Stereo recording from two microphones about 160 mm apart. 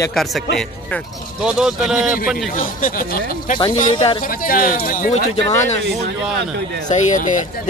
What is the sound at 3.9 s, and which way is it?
Speech, 30° left (ahead or behind).